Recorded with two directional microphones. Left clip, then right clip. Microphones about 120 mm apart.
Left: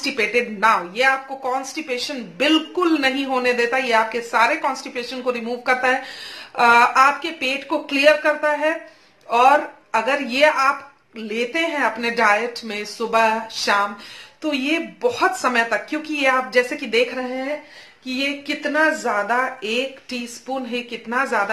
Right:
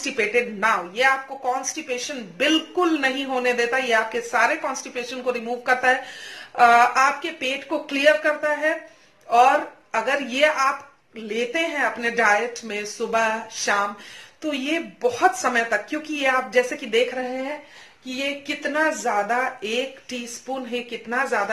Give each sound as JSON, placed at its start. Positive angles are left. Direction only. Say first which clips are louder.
{"t": 0.0, "sound": "speech", "louder": "left 2 dB", "side_deg": 25}
{"t": 18.0, "sound": "speech", "louder": "left 3 dB", "side_deg": 20}